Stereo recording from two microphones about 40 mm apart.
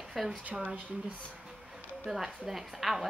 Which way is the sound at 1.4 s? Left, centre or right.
Centre.